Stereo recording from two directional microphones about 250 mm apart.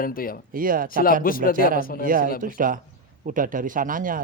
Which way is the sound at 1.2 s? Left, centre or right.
Left.